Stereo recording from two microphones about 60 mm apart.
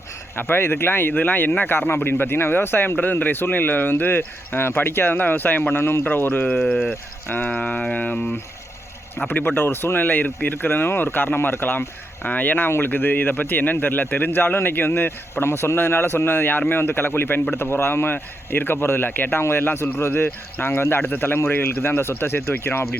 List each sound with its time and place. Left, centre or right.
0.3 s a man's voice: left